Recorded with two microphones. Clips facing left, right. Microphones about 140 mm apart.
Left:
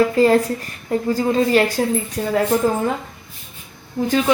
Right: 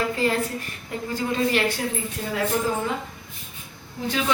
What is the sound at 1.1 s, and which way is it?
A woman's voice, 40° left (ahead or behind).